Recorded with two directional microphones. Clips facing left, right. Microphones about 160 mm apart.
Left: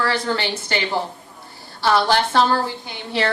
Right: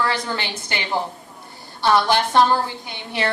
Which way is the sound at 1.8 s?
15° right (ahead or behind).